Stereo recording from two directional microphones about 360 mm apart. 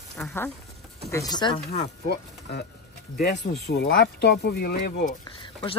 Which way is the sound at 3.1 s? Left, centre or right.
Left.